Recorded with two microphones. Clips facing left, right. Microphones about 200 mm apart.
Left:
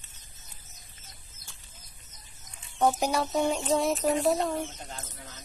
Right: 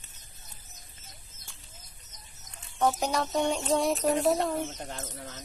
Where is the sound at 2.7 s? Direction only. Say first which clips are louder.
Left 2 dB; 10° left (ahead or behind).